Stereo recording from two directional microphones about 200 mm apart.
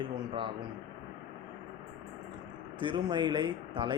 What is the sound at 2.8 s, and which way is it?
Speech, 20° right (ahead or behind).